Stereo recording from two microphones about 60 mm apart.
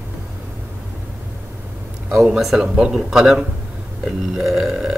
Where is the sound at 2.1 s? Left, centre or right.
Centre.